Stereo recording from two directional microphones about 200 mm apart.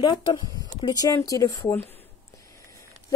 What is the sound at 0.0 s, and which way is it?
Speech, 20° left (ahead or behind).